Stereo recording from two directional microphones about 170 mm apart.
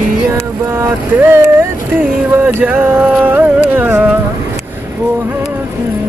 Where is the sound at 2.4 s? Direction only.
10° right (ahead or behind).